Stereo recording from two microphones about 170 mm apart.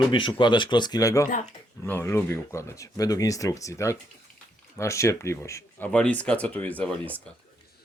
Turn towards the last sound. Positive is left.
turn(degrees=10)  # may be behind; listen again after turning